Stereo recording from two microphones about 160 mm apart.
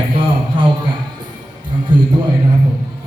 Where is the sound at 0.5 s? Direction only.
30° right (ahead or behind).